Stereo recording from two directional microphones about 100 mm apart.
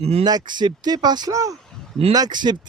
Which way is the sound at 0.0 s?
90° right.